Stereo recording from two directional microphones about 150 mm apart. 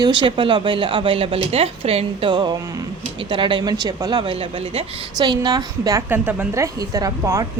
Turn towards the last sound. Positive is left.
turn(degrees=-20)  # may be behind; listen again after turning